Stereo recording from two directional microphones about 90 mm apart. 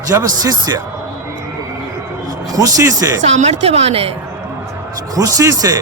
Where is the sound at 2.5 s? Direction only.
40° right (ahead or behind).